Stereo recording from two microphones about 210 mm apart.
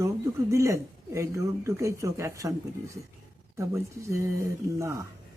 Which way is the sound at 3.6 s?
15° right (ahead or behind).